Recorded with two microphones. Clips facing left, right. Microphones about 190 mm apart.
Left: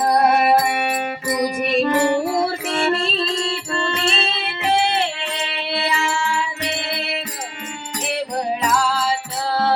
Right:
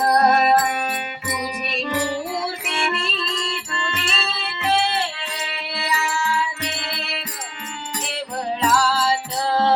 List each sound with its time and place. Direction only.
0.2 s music: 10° left (ahead or behind)
1.3 s music: 45° left (ahead or behind); by 7.2 s 20° left (ahead or behind)
8.6 s music: 5° right (ahead or behind)